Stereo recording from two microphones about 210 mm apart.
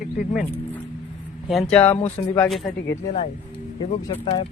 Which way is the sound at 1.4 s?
Centre (ahead or behind).